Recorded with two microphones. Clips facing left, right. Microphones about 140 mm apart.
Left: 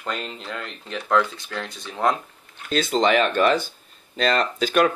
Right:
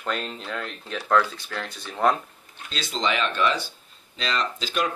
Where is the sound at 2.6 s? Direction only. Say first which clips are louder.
Left 7 dB; 50° left (ahead or behind).